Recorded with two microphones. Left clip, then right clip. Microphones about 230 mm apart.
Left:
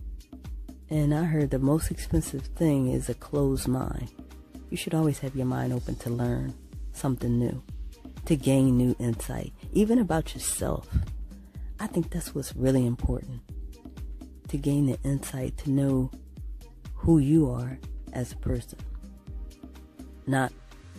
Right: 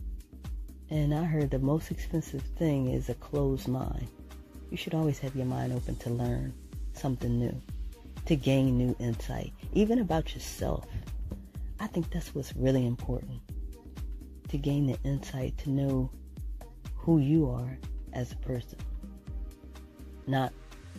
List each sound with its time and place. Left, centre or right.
0.8 s speech: left
11.8 s speech: left
14.5 s speech: left
20.2 s speech: left